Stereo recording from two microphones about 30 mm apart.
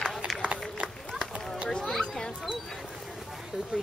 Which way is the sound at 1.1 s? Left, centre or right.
Right.